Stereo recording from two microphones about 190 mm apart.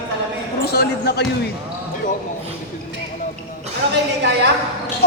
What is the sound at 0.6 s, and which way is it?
Speech, 55° left (ahead or behind).